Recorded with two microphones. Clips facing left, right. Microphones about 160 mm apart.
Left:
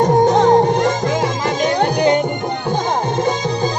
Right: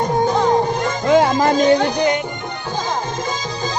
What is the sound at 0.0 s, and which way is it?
Music, 75° left (ahead or behind).